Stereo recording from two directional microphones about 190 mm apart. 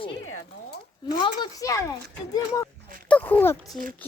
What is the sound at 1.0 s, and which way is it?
Speech, 20° left (ahead or behind).